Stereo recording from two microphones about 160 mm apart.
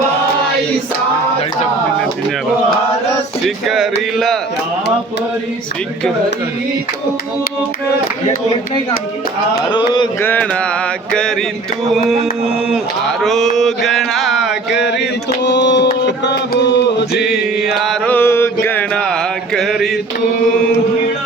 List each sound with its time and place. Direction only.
3.7 s mantra: centre (ahead or behind)
9.6 s speech: 30° left (ahead or behind)
10.2 s mantra: 10° left (ahead or behind)
12.7 s mantra: centre (ahead or behind)
14.8 s chant: 90° left
15.4 s a sound: 90° left
17.2 s mantra: centre (ahead or behind)
18.1 s mantra: 15° left (ahead or behind)